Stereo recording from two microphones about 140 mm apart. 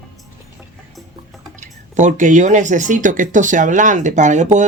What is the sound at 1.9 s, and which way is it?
Speech, 65° right (ahead or behind).